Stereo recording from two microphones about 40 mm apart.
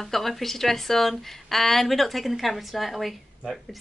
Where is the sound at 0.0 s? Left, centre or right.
Centre.